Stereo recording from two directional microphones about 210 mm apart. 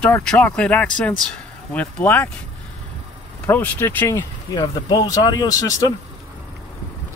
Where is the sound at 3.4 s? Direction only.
10° left (ahead or behind).